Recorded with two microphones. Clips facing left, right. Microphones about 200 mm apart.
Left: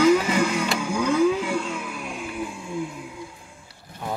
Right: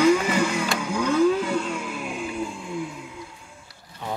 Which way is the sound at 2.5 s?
20° left (ahead or behind).